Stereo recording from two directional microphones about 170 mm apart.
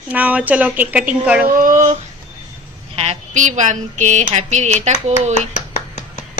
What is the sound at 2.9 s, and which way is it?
A woman's voice, 35° right (ahead or behind).